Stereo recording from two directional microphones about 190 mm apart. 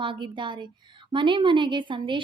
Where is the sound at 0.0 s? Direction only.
25° right (ahead or behind).